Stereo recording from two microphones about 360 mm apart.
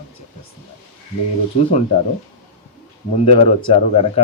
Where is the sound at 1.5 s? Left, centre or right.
Centre.